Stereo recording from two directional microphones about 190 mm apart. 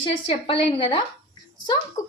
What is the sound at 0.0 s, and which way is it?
A woman's voice, 25° left (ahead or behind).